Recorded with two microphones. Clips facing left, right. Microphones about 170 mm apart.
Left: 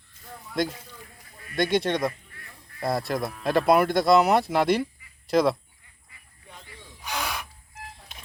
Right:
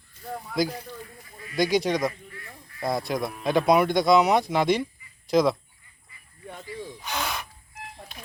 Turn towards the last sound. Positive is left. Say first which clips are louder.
# right 1 dB
turn(degrees=10)  # may be behind; listen again after turning